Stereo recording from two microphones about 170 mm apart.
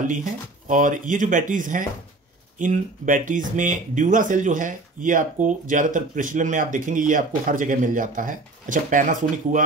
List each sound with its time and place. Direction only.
0.0 s speech: 50° right (ahead or behind)